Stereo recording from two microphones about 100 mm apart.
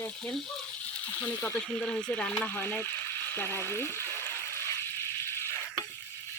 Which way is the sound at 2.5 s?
20° left (ahead or behind).